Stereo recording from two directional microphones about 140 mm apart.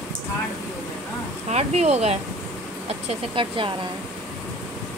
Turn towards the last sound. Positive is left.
turn(degrees=-35)  # may be behind; listen again after turning